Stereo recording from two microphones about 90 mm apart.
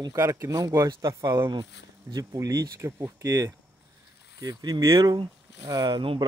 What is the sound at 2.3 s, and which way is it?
Speech, 40° right (ahead or behind).